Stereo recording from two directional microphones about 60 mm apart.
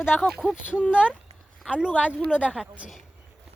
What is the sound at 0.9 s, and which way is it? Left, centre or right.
A woman's voice, centre.